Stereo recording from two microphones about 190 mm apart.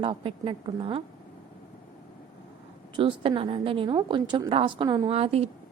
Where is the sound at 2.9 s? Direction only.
30° right (ahead or behind).